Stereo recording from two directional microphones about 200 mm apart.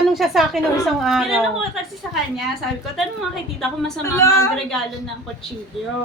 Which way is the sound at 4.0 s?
15° left (ahead or behind).